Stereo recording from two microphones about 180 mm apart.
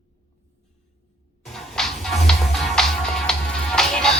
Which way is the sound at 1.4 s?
Centre (ahead or behind).